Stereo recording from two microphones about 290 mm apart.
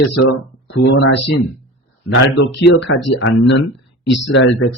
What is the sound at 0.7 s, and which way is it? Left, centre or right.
Speech, left.